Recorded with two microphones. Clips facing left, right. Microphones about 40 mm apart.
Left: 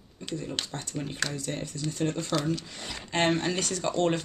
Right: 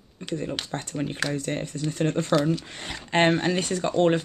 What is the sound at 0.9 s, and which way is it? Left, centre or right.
Speech, right.